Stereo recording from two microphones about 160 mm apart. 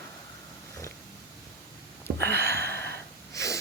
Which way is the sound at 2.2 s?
90° right.